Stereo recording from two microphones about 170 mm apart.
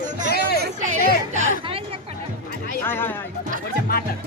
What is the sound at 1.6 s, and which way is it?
Speech, 35° right (ahead or behind).